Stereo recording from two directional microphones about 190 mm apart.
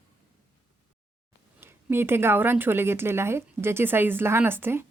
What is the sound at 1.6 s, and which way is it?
Speech, 10° right (ahead or behind).